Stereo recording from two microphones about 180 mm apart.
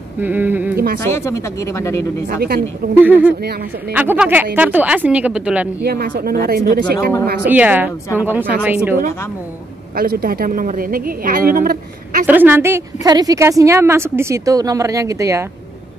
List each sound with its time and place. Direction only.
0.2 s a woman's voice: 10° right (ahead or behind)
1.0 s speech: 15° left (ahead or behind)
2.2 s a woman's voice: 55° right (ahead or behind)
3.0 s a woman's voice: 10° right (ahead or behind)
5.8 s speech: 60° right (ahead or behind)
7.4 s a woman's voice: 10° right (ahead or behind)
9.9 s a woman's voice: 55° right (ahead or behind)
12.3 s a woman's voice: 10° right (ahead or behind)